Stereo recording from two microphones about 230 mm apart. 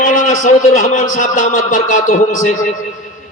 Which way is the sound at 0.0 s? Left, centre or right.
Left.